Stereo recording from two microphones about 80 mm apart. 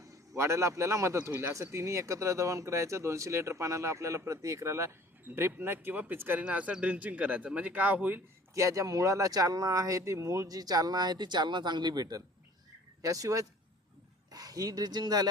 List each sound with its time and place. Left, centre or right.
0.3 s speech: right
8.5 s speech: right
13.0 s speech: right